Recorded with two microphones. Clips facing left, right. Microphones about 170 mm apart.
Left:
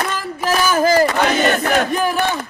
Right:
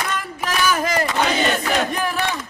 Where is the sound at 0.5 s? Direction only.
30° left (ahead or behind).